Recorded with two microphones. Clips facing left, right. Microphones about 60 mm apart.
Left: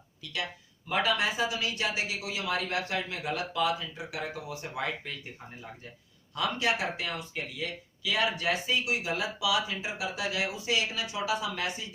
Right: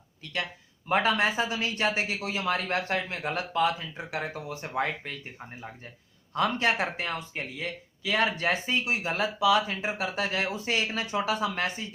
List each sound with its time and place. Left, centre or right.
0.9 s speech: right
6.3 s speech: right